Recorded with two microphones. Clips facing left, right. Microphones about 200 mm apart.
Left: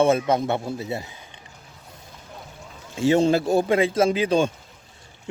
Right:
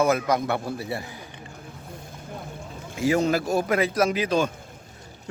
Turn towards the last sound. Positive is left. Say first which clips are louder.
# left 3 dB
turn(degrees=30)  # may be behind; listen again after turning